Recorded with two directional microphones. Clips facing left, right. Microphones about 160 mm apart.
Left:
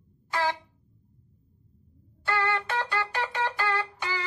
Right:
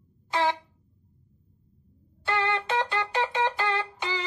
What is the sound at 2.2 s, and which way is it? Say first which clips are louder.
Music: right 1 dB; 20° right (ahead or behind).